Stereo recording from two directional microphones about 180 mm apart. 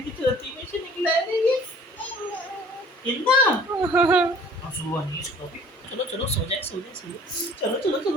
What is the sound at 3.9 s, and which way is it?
Speech, 5° right (ahead or behind).